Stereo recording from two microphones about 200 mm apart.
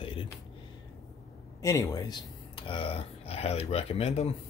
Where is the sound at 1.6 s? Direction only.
15° left (ahead or behind); by 4.3 s 30° left (ahead or behind).